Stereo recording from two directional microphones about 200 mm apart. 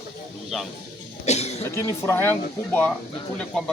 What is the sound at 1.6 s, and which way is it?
Speech, 15° left (ahead or behind).